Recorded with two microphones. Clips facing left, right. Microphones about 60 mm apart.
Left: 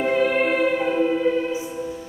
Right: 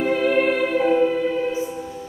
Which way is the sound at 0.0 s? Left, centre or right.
Centre.